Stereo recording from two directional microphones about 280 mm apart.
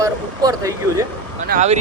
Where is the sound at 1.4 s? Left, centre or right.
Right.